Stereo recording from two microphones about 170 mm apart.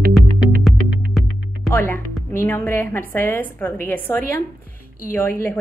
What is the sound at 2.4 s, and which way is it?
A woman's voice, 10° left (ahead or behind).